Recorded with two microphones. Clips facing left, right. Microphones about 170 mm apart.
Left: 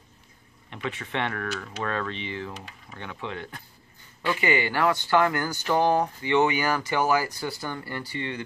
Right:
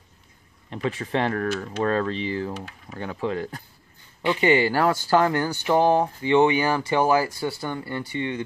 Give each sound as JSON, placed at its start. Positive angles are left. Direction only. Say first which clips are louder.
{"t": 0.7, "sound": "speech", "louder": "right 6 dB", "side_deg": -35}